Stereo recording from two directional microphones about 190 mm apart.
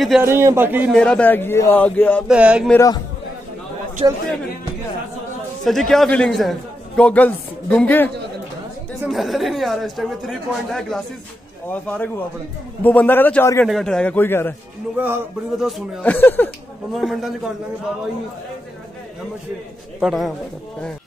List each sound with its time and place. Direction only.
0.2 s a man's voice: 15° right (ahead or behind)
0.9 s speech: 5° left (ahead or behind)
2.2 s speech: 5° right (ahead or behind)
2.7 s speech: 15° left (ahead or behind)
4.0 s a man's voice: 25° right (ahead or behind)
5.7 s speech: centre (ahead or behind)
15.0 s speech: 5° right (ahead or behind)
16.9 s speech: centre (ahead or behind)
20.0 s speech: centre (ahead or behind)